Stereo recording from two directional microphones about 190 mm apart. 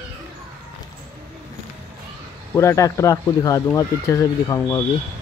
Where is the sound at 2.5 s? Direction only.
15° left (ahead or behind).